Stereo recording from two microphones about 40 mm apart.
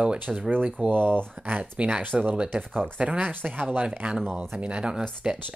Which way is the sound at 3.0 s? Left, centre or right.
Right.